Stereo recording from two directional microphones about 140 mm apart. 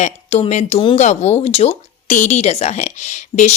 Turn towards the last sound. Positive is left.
turn(degrees=60)  # may be behind; listen again after turning